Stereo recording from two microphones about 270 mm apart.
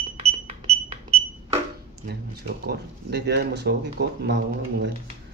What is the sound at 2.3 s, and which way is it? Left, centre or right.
Speech, right.